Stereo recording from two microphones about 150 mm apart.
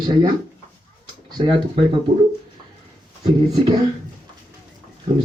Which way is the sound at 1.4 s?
40° right (ahead or behind).